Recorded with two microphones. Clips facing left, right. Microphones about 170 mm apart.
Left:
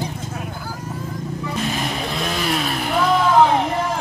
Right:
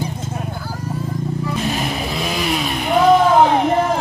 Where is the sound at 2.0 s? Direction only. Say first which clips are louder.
Right 2 dB; 5° right (ahead or behind).